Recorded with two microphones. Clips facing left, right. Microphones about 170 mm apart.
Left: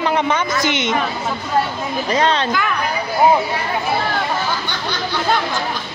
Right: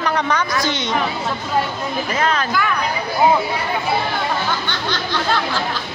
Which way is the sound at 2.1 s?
30° left (ahead or behind).